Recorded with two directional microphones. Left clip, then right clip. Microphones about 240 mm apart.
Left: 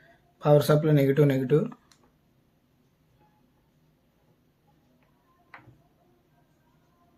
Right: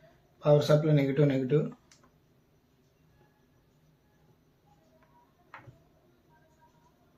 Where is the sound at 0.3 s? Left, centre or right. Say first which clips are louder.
Left 3 dB; left.